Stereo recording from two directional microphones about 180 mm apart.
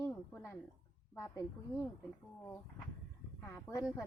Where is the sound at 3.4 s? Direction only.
5° left (ahead or behind).